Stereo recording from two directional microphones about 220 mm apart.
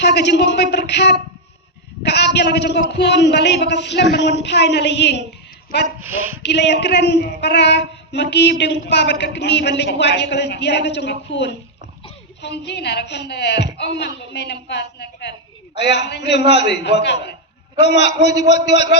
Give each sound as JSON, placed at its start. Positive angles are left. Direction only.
{"t": 0.0, "sound": "female singing", "side_deg": 50}
{"t": 6.0, "sound": "a woman's voice", "side_deg": -10}
{"t": 6.4, "sound": "female singing", "side_deg": 50}